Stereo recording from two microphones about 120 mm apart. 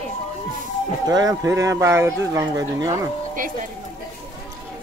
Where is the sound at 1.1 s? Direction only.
30° right (ahead or behind).